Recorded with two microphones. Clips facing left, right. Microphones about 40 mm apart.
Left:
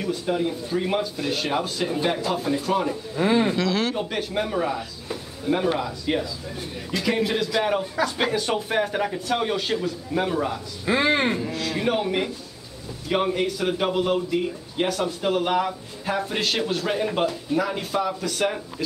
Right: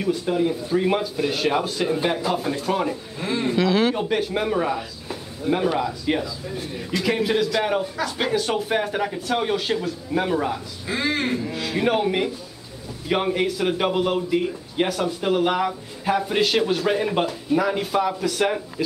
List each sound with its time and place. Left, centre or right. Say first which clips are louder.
0.0 s speech: right 3 dB; centre
3.2 s speech: left 5 dB; centre
3.5 s speech: right 4 dB; centre
10.9 s a man's voice: left 3 dB; left
11.5 s speech: right 2 dB; centre